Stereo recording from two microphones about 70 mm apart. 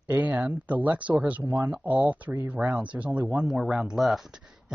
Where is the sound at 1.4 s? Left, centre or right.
Right.